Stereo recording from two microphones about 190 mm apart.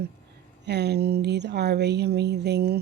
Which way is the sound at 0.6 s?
60° right (ahead or behind).